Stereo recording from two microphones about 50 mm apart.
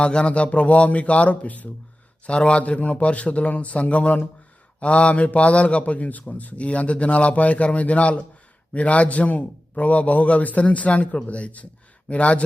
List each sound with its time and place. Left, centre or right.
0.0 s a man's voice: left
2.2 s a man's voice: left